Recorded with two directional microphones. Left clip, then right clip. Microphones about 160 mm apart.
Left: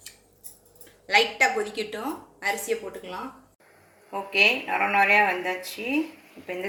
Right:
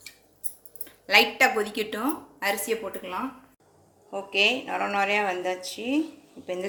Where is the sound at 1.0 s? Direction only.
90° right.